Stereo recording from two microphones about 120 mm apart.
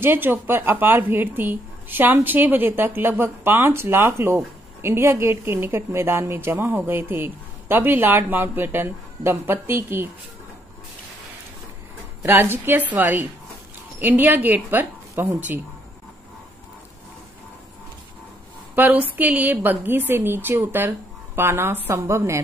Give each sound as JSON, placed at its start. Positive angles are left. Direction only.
{"t": 0.0, "sound": "a woman's voice", "side_deg": -15}
{"t": 12.2, "sound": "a woman's voice", "side_deg": -15}
{"t": 18.8, "sound": "a woman's voice", "side_deg": -15}